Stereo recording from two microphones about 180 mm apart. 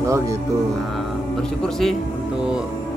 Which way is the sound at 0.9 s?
5° left (ahead or behind).